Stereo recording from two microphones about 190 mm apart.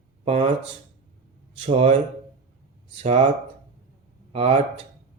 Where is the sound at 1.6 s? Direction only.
40° right (ahead or behind).